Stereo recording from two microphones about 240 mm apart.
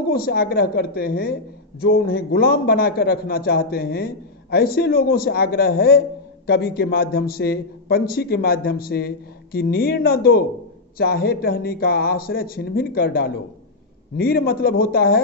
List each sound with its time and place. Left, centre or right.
0.1 s a man's voice: left